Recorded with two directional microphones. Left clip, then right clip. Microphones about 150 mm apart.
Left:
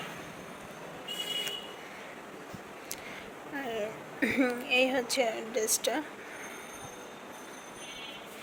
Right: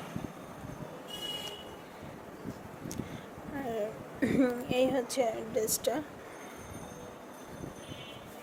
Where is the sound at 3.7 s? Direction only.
25° right (ahead or behind).